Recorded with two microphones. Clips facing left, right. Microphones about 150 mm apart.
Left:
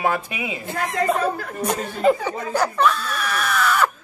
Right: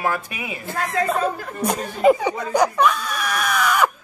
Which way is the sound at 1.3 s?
10° right (ahead or behind).